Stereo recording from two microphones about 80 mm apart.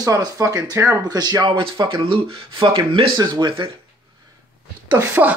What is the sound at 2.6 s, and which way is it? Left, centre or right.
Speech, right.